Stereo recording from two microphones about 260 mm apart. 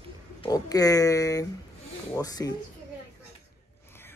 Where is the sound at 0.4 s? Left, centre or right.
Centre.